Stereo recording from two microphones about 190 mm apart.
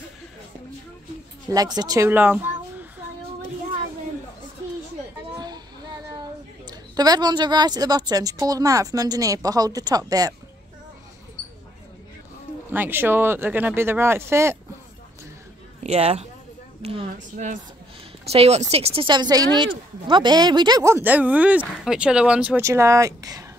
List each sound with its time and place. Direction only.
1.5 s speech: 20° right (ahead or behind)
5.3 s a sound: 20° right (ahead or behind)
6.7 s speech: 20° right (ahead or behind)
12.7 s speech: 10° right (ahead or behind)
15.8 s speech: 35° right (ahead or behind); by 23.4 s 15° right (ahead or behind)